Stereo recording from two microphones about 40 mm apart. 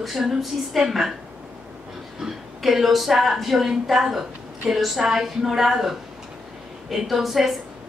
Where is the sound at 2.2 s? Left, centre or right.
Centre.